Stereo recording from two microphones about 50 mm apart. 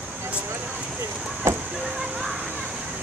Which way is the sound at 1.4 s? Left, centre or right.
Right.